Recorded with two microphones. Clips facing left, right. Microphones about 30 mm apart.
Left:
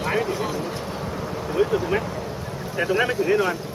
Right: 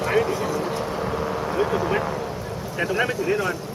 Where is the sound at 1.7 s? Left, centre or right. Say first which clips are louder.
Even; centre.